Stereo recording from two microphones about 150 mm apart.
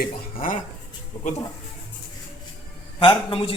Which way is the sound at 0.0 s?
70° left (ahead or behind).